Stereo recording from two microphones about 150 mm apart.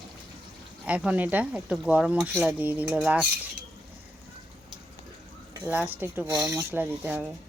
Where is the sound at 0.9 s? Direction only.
10° right (ahead or behind).